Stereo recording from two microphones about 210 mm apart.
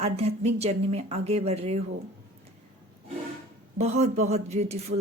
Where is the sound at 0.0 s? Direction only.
30° right (ahead or behind).